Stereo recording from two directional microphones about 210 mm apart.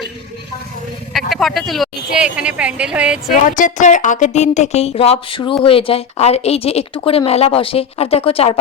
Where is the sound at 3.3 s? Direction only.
40° left (ahead or behind).